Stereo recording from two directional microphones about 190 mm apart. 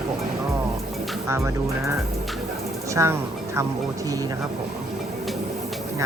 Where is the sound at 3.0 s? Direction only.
15° right (ahead or behind).